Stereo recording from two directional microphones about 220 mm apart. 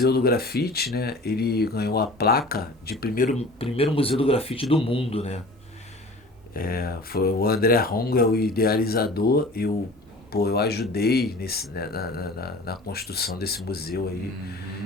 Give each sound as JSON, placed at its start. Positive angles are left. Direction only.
{"t": 0.0, "sound": "speech", "side_deg": 45}
{"t": 6.5, "sound": "speech", "side_deg": 40}